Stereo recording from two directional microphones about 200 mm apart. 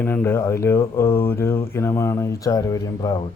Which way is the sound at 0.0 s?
10° left (ahead or behind).